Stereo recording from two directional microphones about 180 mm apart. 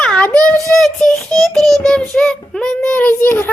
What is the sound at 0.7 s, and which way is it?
Child singing, 5° left (ahead or behind).